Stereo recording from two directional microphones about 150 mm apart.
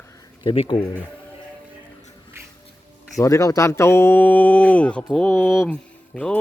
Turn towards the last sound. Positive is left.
turn(degrees=5)  # may be behind; listen again after turning